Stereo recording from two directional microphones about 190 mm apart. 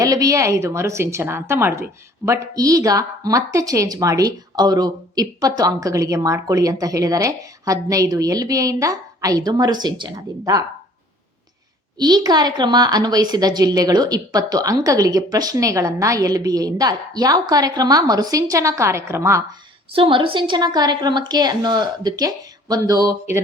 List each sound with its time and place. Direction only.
0.0 s a woman's voice: 20° right (ahead or behind)
11.9 s a woman's voice: 20° right (ahead or behind)
20.0 s a woman's voice: 25° right (ahead or behind)